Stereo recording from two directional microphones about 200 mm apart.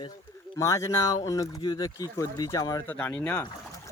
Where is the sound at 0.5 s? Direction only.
15° left (ahead or behind).